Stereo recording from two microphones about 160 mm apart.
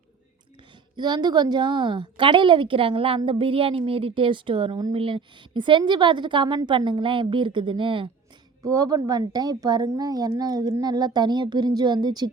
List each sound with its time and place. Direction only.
0.9 s a woman's voice: 25° right (ahead or behind)